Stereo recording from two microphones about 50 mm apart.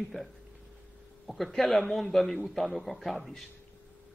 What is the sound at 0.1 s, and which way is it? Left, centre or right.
Speech, left.